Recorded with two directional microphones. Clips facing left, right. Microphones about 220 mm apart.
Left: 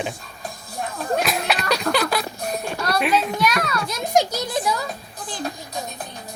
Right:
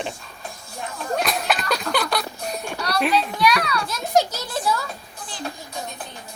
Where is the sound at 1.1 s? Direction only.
Centre (ahead or behind).